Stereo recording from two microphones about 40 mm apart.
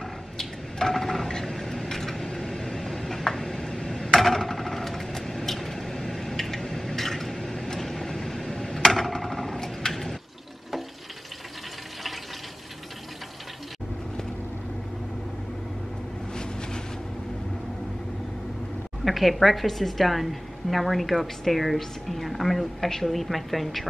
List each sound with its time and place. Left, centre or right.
0.4 s a sound: centre
3.4 s tick-tock: centre
4.1 s vehicle: centre
19.0 s a woman's voice: centre